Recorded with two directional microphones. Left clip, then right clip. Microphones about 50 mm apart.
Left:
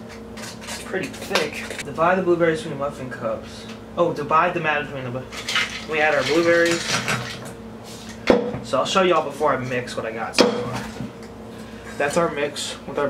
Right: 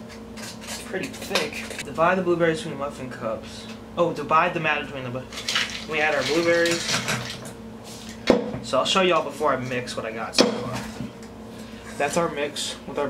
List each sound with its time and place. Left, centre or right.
0.7 s speech: centre
2.0 s speech: centre
8.3 s speech: centre
10.4 s speech: centre
12.0 s speech: centre